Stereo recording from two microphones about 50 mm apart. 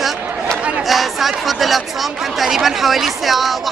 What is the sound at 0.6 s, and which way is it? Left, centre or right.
Chatter, right.